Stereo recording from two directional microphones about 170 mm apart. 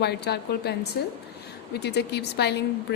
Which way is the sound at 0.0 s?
75° left (ahead or behind).